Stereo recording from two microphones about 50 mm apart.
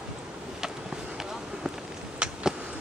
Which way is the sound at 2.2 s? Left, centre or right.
Centre.